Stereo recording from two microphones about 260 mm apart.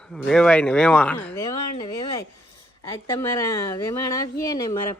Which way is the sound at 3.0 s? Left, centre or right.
Centre.